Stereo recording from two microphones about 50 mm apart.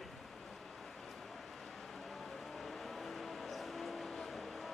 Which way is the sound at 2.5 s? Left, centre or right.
Centre.